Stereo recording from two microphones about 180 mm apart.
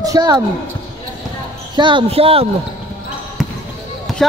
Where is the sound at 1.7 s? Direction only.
25° right (ahead or behind).